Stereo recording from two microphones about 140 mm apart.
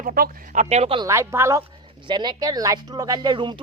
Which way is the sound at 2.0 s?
30° right (ahead or behind).